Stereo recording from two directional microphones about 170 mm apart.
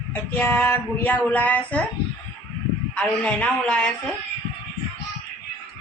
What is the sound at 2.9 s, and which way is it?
Speech, 5° left (ahead or behind).